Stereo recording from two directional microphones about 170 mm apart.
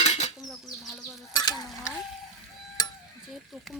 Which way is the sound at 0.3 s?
Centre (ahead or behind).